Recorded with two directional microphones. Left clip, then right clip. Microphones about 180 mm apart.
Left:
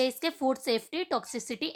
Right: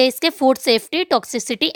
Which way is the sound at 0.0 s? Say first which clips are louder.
Right 12 dB; 45° right (ahead or behind).